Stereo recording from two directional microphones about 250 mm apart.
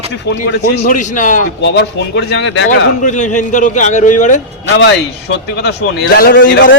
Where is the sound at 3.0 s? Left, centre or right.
Left.